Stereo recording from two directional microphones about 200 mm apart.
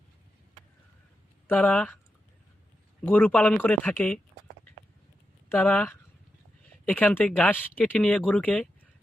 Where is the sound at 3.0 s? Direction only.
10° left (ahead or behind).